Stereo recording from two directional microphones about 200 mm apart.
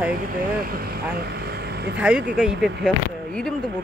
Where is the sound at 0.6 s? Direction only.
50° right (ahead or behind).